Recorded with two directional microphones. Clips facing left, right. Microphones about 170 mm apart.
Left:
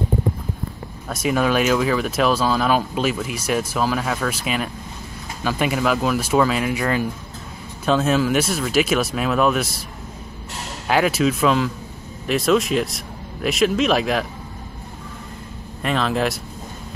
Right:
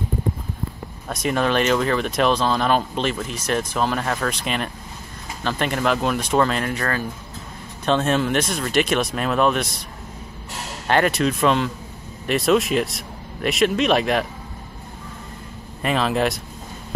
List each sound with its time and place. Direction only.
1.0 s speech: 5° left (ahead or behind)
10.9 s speech: 5° left (ahead or behind)
15.8 s speech: centre (ahead or behind)